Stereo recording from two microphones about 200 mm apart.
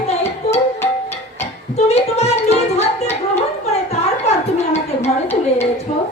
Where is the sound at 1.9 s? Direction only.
30° left (ahead or behind).